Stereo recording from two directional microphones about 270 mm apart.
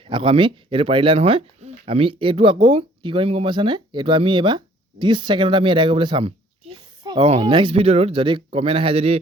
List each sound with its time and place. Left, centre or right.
0.1 s speech: centre